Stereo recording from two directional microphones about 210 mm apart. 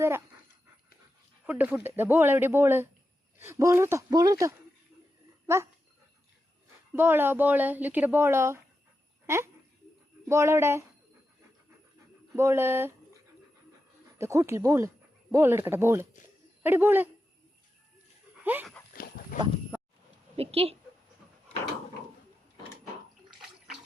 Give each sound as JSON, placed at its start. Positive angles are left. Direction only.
{"t": 1.5, "sound": "speech", "side_deg": -10}
{"t": 6.9, "sound": "speech", "side_deg": -10}
{"t": 12.3, "sound": "speech", "side_deg": -15}
{"t": 14.2, "sound": "speech", "side_deg": -15}
{"t": 18.4, "sound": "speech", "side_deg": -10}
{"t": 18.9, "sound": "livestock", "side_deg": 45}
{"t": 20.3, "sound": "a woman's voice", "side_deg": -30}